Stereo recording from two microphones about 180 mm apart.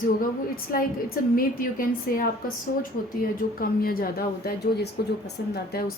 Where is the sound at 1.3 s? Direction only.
50° left (ahead or behind).